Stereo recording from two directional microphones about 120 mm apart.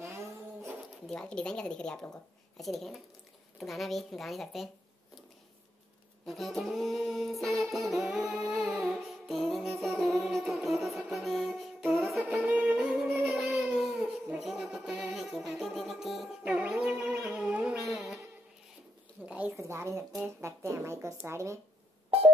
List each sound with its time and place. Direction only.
0.0 s a sound: 20° right (ahead or behind)
1.0 s a woman's voice: 5° left (ahead or behind)
3.5 s music: centre (ahead or behind)
6.2 s music: centre (ahead or behind)
12.3 s music: 10° right (ahead or behind)
19.2 s speech: 15° right (ahead or behind)